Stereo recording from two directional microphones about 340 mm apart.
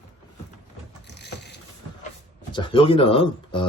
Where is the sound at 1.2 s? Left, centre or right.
Left.